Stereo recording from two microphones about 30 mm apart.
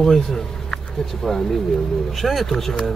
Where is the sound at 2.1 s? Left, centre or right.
Centre.